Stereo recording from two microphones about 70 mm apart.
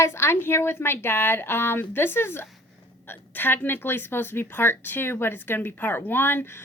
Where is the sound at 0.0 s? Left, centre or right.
Left.